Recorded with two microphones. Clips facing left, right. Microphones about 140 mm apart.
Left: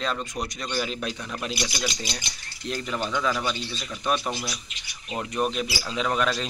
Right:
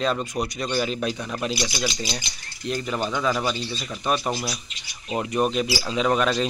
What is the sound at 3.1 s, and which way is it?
Speech, 15° right (ahead or behind).